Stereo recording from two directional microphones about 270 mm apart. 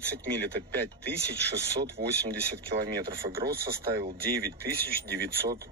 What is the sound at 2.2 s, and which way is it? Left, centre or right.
Speech, right.